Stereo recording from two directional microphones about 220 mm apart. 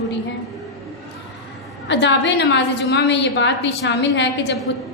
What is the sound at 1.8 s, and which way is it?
A woman's voice, 55° left (ahead or behind).